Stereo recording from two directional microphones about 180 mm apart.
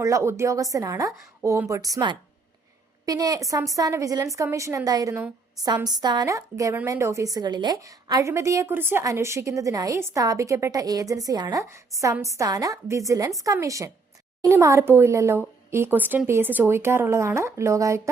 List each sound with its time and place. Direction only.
0.0 s a woman's voice: 15° right (ahead or behind)